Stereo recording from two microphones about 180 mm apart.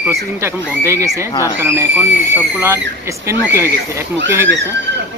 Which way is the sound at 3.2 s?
15° right (ahead or behind).